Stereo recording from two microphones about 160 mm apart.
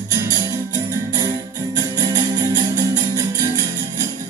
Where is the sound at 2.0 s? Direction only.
25° right (ahead or behind).